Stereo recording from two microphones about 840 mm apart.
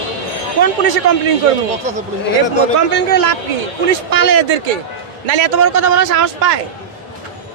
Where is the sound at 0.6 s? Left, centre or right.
Right.